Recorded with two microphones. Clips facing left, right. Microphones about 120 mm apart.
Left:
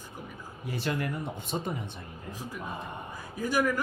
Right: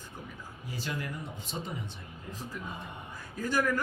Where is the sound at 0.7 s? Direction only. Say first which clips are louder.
Left 6 dB; 60° left (ahead or behind).